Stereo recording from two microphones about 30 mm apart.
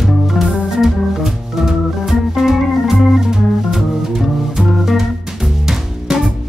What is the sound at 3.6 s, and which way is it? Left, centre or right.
Music, right.